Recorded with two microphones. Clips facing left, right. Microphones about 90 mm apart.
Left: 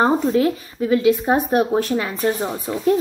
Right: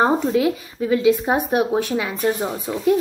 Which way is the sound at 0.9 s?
20° right (ahead or behind).